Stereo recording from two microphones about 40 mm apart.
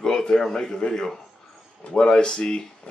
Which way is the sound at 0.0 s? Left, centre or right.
Centre.